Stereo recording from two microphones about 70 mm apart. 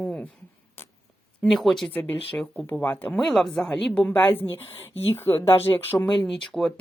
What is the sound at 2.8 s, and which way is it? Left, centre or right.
Speech, left.